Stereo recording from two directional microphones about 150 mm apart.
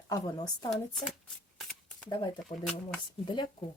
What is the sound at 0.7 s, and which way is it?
Speech, centre (ahead or behind).